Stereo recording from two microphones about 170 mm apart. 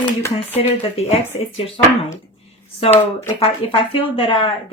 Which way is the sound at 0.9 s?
35° left (ahead or behind).